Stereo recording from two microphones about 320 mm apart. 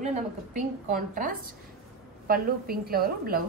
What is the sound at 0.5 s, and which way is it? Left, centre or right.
A woman's voice, right.